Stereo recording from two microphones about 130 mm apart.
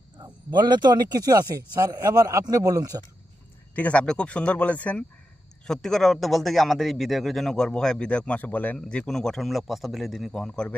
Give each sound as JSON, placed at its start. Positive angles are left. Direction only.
{"t": 0.2, "sound": "speech", "side_deg": -35}
{"t": 3.8, "sound": "a man's voice", "side_deg": 10}